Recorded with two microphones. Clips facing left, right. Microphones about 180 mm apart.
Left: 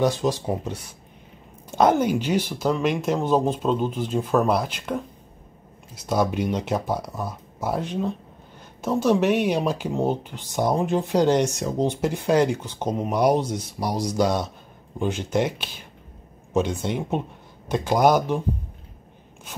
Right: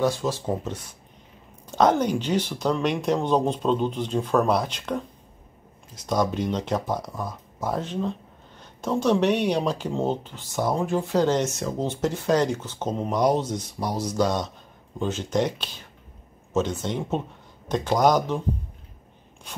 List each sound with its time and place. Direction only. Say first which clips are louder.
0.0 s speech: left 2 dB; 20° left (ahead or behind)
6.0 s speech: left 1 dB; 10° left (ahead or behind)